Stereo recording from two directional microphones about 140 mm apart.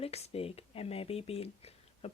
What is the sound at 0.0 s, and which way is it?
Speech, 45° left (ahead or behind).